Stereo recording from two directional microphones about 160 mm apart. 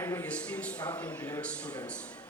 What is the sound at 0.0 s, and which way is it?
A man's voice, 15° left (ahead or behind).